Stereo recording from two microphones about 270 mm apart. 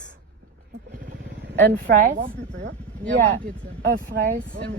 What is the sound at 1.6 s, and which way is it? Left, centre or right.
Speech, right.